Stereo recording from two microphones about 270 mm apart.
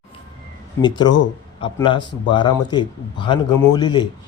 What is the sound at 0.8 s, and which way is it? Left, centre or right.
A man's voice, centre.